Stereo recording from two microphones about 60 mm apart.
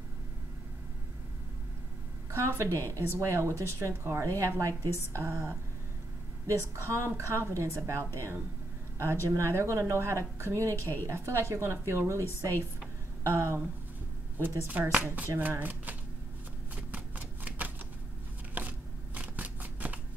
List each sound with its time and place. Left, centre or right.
2.3 s speech: right
13.2 s speech: right
14.7 s speech: right
16.9 s a sound: right
18.5 s shuffling cards: right